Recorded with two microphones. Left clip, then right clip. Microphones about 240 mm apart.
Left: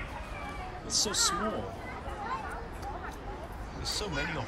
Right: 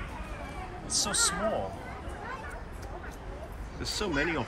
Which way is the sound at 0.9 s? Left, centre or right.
Centre.